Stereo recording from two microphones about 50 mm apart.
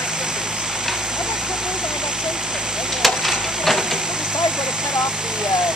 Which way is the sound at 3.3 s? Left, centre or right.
Centre.